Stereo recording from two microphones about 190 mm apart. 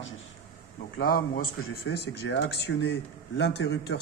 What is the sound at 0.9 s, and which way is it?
Speech, 50° left (ahead or behind).